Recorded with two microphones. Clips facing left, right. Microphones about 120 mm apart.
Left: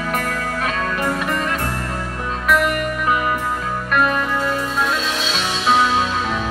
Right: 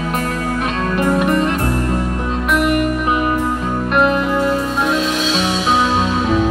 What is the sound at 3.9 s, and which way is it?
Music, 20° right (ahead or behind).